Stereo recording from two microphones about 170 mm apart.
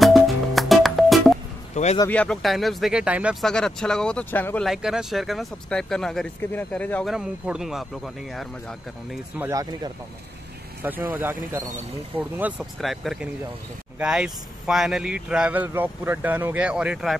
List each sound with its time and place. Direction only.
0.0 s music: centre (ahead or behind)
2.0 s speech: 5° left (ahead or behind)
4.6 s speech: centre (ahead or behind)
7.1 s speech: 5° right (ahead or behind)
9.4 s speech: 20° right (ahead or behind)
10.8 s speech: 10° right (ahead or behind)